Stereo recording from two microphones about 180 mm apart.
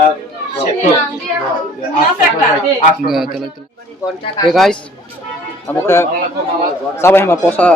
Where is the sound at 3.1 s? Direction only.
Centre (ahead or behind).